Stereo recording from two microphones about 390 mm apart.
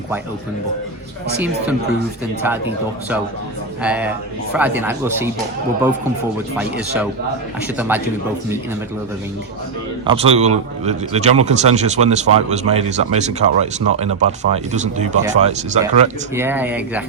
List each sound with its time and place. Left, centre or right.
3.8 s speech: centre
6.6 s speech: centre
10.1 s speech: centre
16.3 s speech: centre